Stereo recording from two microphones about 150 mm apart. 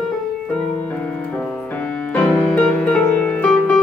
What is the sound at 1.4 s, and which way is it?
Music, 10° left (ahead or behind).